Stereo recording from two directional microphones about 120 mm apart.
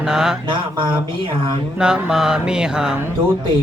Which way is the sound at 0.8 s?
40° right (ahead or behind).